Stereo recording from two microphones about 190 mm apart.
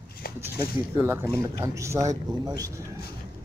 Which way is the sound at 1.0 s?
15° right (ahead or behind).